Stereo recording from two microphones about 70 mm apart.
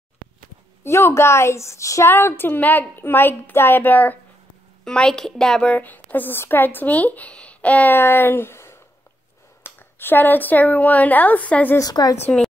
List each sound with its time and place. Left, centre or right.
0.8 s a woman's voice: left
2.0 s speech: left
4.8 s a child's voice: centre
5.6 s speech: left
11.8 s speech: left